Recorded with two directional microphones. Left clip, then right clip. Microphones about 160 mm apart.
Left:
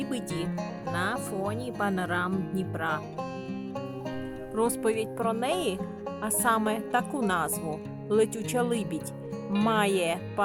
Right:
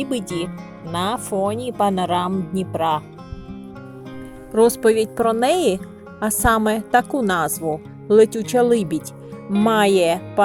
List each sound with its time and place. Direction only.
0.0 s speech: 10° right (ahead or behind)
4.5 s speech: 15° right (ahead or behind)